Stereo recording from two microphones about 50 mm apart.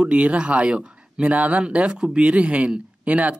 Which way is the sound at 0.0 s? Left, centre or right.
Right.